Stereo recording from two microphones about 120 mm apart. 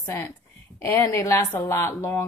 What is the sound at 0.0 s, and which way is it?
A woman's voice, 25° left (ahead or behind).